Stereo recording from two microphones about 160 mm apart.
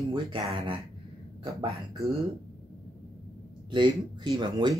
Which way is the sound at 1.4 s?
25° right (ahead or behind).